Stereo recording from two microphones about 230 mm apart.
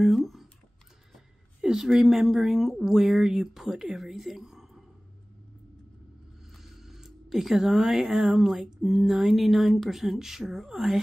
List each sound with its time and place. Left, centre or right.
0.0 s speech: centre
1.6 s speech: centre
6.5 s speech: centre